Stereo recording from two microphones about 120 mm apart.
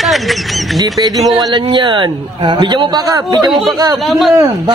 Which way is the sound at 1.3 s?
40° right (ahead or behind).